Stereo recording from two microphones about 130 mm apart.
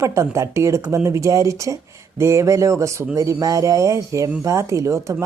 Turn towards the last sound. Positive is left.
turn(degrees=-25)  # may be behind; listen again after turning